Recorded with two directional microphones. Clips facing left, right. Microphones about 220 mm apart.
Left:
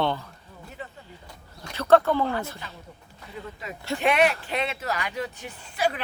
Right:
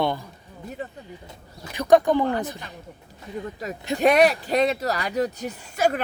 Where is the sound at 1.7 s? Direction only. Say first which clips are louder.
Right 2 dB; 15° right (ahead or behind).